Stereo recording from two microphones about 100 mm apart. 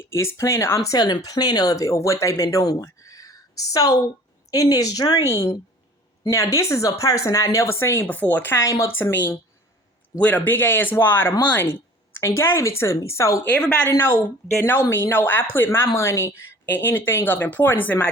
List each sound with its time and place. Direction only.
0.0 s speech: 25° left (ahead or behind)
5.3 s speech: 30° left (ahead or behind)
13.6 s speech: 10° left (ahead or behind)
13.9 s speech: 20° left (ahead or behind)